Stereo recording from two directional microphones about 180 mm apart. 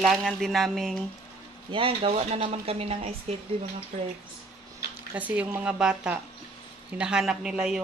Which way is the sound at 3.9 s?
45° right (ahead or behind).